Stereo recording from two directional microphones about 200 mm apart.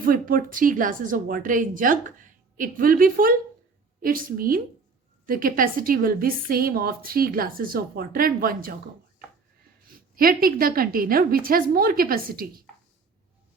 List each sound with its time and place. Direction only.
0.0 s a woman's voice: 45° right (ahead or behind)
9.8 s a woman's voice: 45° right (ahead or behind)